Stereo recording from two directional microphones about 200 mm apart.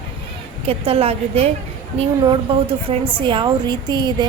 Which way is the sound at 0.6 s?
30° right (ahead or behind).